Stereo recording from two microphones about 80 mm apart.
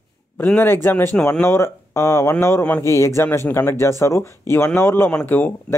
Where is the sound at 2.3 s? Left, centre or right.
Left.